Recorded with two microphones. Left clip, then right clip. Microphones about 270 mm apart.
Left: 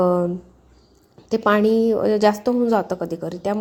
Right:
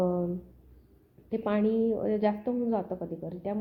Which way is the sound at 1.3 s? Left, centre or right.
Left.